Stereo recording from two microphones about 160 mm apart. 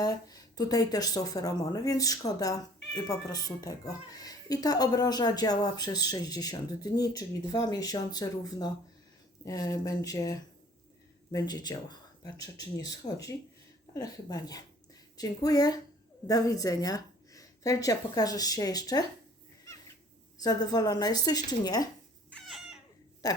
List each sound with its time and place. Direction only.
0.0 s a woman's voice: 25° left (ahead or behind)
20.4 s speech: 25° left (ahead or behind)
22.3 s cat: centre (ahead or behind)
23.2 s speech: 25° left (ahead or behind)